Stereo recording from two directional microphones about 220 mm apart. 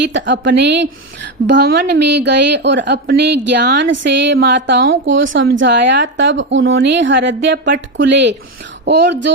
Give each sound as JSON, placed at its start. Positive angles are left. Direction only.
{"t": 0.0, "sound": "a woman's voice", "side_deg": -55}